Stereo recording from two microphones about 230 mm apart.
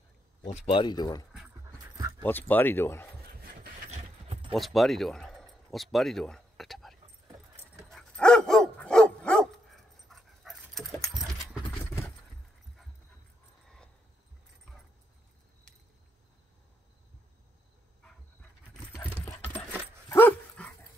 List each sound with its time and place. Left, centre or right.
0.5 s speech: left
2.0 s keys jangling: centre
2.2 s speech: centre
3.4 s a sound: right
4.6 s a sound: centre
7.9 s dog: centre
18.7 s coin: centre
20.1 s dog: centre